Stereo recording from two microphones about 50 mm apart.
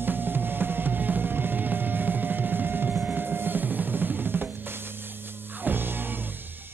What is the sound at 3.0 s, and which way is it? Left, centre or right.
Drum, right.